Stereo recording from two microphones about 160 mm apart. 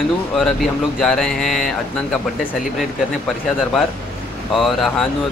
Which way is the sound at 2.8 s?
Centre (ahead or behind).